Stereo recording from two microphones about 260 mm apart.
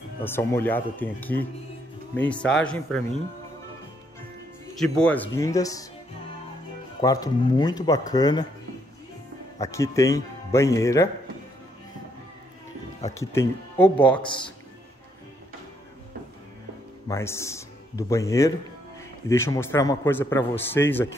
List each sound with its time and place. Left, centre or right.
0.2 s a man's voice: centre
4.7 s a man's voice: centre
7.0 s a man's voice: centre
9.6 s a man's voice: centre
13.1 s a man's voice: centre
14.2 s a man's voice: centre
17.1 s a man's voice: centre